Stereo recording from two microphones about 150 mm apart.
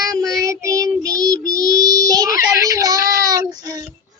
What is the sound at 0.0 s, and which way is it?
Child singing, 20° right (ahead or behind).